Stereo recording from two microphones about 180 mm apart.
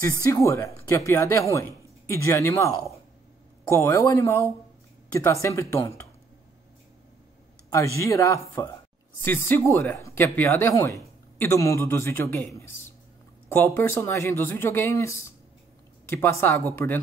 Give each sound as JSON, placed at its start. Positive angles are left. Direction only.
{"t": 0.0, "sound": "a man's voice", "side_deg": 15}
{"t": 8.0, "sound": "a man's voice", "side_deg": 15}